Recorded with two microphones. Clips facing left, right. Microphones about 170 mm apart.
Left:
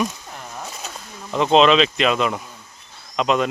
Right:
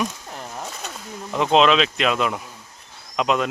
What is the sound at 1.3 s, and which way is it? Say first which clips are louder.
Speech: left 2 dB; 5° right (ahead or behind).